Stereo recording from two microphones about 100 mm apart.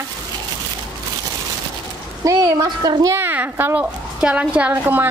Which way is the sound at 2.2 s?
35° right (ahead or behind).